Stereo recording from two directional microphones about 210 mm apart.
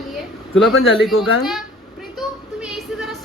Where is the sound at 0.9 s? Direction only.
Centre (ahead or behind).